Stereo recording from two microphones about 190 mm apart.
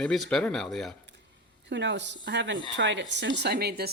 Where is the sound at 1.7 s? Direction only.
70° right (ahead or behind).